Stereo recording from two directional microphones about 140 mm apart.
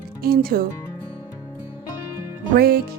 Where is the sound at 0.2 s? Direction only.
90° right.